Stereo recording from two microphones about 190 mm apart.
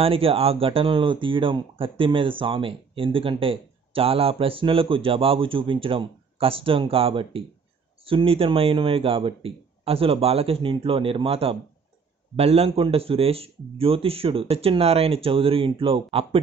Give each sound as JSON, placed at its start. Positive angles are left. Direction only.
{"t": 0.0, "sound": "speech", "side_deg": -30}